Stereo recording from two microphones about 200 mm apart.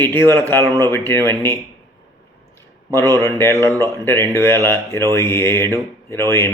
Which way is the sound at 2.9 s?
15° left (ahead or behind).